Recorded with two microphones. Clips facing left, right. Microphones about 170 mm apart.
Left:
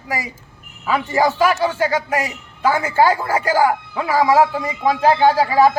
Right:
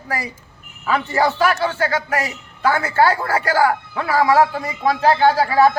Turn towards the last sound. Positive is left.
turn(degrees=15)  # may be behind; listen again after turning